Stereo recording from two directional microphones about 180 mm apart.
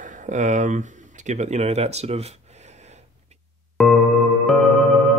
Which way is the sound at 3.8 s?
5° left (ahead or behind).